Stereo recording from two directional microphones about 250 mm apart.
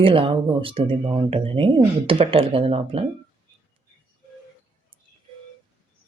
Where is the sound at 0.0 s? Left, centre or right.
Right.